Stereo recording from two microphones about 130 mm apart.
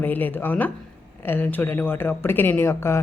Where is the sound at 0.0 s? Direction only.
15° left (ahead or behind).